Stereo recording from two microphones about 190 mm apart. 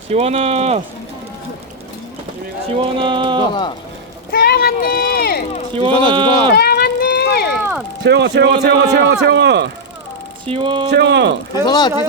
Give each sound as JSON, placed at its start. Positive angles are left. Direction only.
{"t": 0.1, "sound": "speech", "side_deg": -35}
{"t": 2.6, "sound": "speech", "side_deg": -30}
{"t": 4.3, "sound": "a sound", "side_deg": 55}
{"t": 5.7, "sound": "speech", "side_deg": -25}
{"t": 6.6, "sound": "a sound", "side_deg": 55}
{"t": 8.0, "sound": "a man's voice", "side_deg": -65}
{"t": 10.5, "sound": "speech", "side_deg": -25}
{"t": 10.9, "sound": "a man's voice", "side_deg": -65}
{"t": 11.6, "sound": "speech", "side_deg": 20}